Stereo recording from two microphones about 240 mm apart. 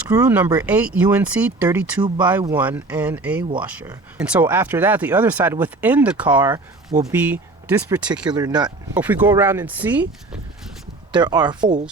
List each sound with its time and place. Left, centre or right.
0.1 s speech: centre
8.3 s speech: centre
11.1 s speech: centre